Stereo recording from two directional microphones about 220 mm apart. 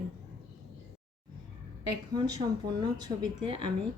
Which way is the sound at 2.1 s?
20° right (ahead or behind).